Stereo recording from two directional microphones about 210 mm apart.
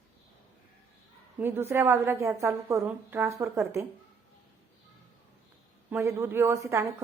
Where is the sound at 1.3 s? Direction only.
10° right (ahead or behind).